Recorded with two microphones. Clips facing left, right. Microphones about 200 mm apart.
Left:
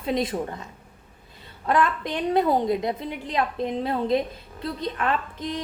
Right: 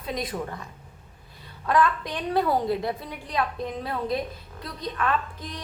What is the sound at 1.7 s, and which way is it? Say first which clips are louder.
A woman's voice: even; 25° left (ahead or behind).